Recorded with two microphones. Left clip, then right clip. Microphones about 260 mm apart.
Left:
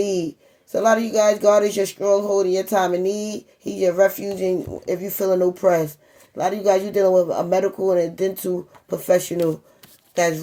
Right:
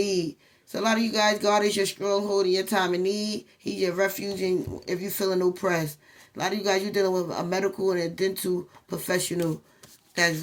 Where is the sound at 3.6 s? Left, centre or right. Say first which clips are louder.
Left 8 dB; right.